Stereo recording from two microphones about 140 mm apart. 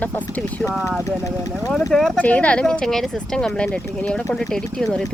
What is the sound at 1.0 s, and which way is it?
Speech, 25° left (ahead or behind).